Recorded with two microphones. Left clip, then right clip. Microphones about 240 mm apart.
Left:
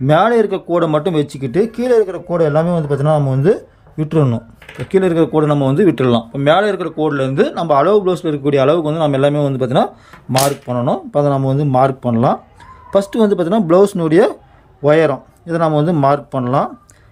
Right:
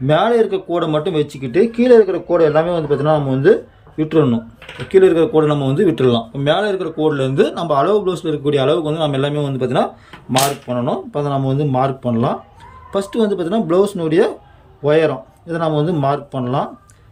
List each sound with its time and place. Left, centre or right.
0.1 s speech: centre